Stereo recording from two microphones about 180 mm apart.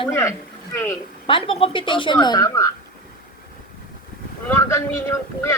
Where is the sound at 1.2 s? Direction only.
30° left (ahead or behind).